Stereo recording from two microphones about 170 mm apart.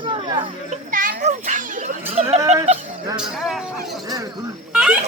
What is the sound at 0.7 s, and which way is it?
A child's voice, 50° right (ahead or behind).